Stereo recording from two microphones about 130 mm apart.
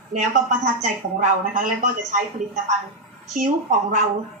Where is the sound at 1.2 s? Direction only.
75° right (ahead or behind).